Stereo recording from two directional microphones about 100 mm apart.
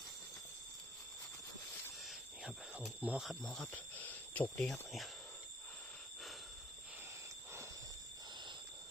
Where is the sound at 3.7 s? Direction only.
15° left (ahead or behind).